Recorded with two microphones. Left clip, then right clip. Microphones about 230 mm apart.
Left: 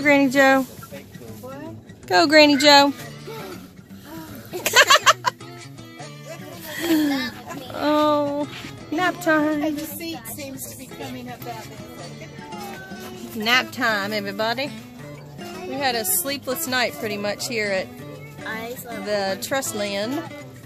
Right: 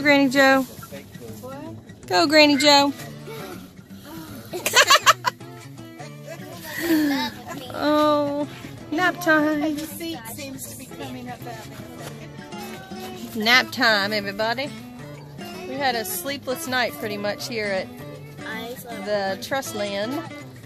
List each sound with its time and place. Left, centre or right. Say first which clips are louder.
0.0 s speech: left 1 dB; centre
1.5 s a sound: even; centre
6.7 s a sound: even; centre
8.9 s speech: right 1 dB; centre
12.5 s music: left 1 dB; centre
13.4 s speech: right 2 dB; centre
14.1 s speech: even; centre
18.5 s music: left 2 dB; left
18.9 s speech: left 1 dB; centre